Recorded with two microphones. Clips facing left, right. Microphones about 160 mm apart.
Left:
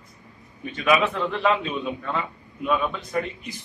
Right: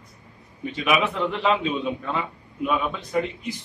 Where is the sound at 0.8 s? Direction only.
15° right (ahead or behind).